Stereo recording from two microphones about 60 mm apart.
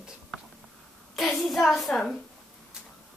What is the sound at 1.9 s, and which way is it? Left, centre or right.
Speech, centre.